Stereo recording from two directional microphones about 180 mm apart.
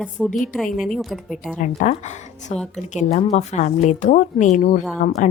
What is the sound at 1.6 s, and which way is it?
A woman's voice, 45° left (ahead or behind).